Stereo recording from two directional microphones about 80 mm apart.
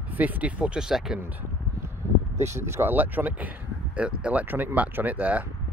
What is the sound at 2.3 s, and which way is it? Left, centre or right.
Speech, right.